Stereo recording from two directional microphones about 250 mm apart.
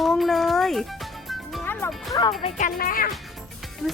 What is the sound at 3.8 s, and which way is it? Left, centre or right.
Speech, centre.